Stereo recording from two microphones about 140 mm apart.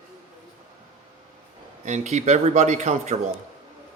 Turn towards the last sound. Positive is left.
turn(degrees=-55)  # may be behind; listen again after turning